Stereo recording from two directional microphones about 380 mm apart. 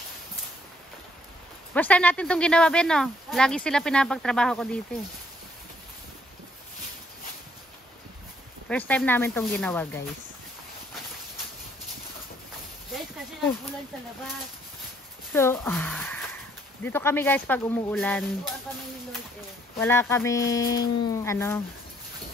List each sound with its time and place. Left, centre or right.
1.7 s speech: centre
8.6 s speech: centre
15.3 s speech: centre
19.8 s speech: centre